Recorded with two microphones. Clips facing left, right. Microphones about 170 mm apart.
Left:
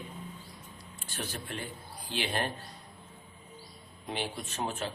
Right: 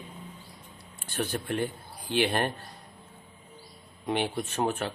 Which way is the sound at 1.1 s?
60° right (ahead or behind).